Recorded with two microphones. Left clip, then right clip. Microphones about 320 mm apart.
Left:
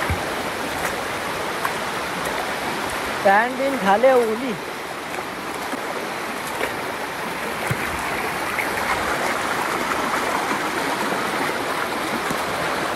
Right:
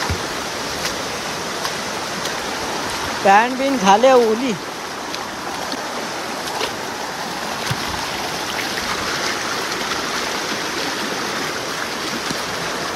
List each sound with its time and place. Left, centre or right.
3.3 s speech: centre